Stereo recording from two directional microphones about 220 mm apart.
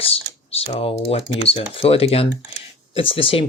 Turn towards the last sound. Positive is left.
turn(degrees=25)  # may be behind; listen again after turning